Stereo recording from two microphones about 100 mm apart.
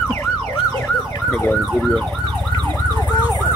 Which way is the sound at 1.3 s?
10° left (ahead or behind).